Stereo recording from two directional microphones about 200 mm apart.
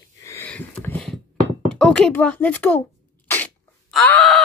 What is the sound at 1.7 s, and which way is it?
Speech, 5° left (ahead or behind).